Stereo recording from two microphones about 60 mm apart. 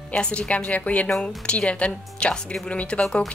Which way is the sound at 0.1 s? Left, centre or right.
Centre.